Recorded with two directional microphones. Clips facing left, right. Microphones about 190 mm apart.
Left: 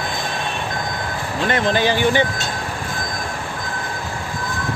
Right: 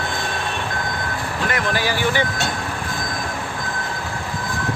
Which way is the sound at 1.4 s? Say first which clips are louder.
Left 5 dB; 25° left (ahead or behind).